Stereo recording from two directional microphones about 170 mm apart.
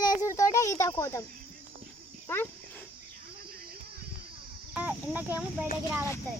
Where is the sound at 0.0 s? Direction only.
20° left (ahead or behind).